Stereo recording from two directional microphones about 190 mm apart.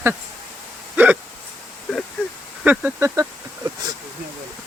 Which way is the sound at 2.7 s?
10° right (ahead or behind).